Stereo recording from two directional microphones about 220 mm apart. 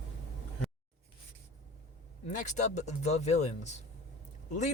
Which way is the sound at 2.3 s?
35° left (ahead or behind).